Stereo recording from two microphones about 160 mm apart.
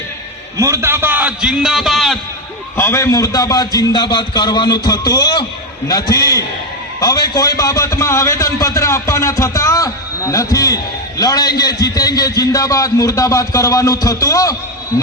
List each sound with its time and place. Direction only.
0.5 s a man's voice: 15° right (ahead or behind); by 2.1 s centre (ahead or behind)
2.7 s a man's voice: 15° left (ahead or behind)